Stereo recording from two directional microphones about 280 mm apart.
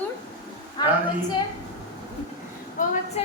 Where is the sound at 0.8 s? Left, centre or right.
Centre.